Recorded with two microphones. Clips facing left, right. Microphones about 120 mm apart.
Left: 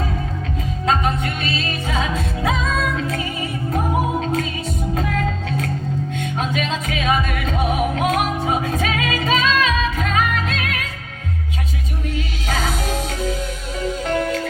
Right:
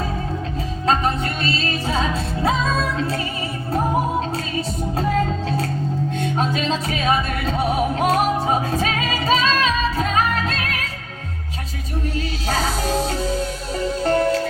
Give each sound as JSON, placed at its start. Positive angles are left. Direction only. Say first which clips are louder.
{"t": 0.9, "sound": "music", "louder": "even", "side_deg": -35}
{"t": 5.5, "sound": "music", "louder": "right 1 dB", "side_deg": -35}
{"t": 12.1, "sound": "music", "louder": "right 1 dB", "side_deg": -35}